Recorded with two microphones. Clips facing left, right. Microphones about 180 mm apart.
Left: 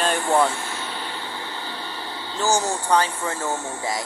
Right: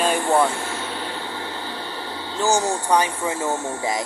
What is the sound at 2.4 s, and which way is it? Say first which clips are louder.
Speech: right 2 dB; 15° right (ahead or behind).